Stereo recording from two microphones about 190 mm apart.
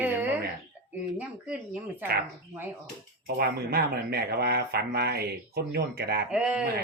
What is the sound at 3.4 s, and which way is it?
Speech, 55° right (ahead or behind).